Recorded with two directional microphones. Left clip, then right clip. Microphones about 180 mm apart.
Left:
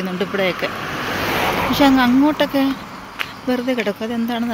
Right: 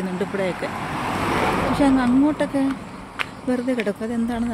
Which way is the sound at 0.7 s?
55° right (ahead or behind).